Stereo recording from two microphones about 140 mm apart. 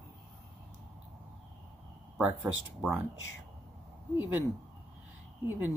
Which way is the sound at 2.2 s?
10° right (ahead or behind).